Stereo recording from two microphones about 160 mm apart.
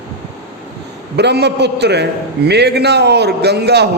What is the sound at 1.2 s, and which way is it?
A man's voice, 90° right.